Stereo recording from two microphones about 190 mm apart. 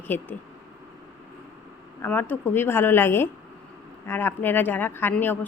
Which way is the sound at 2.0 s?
10° left (ahead or behind).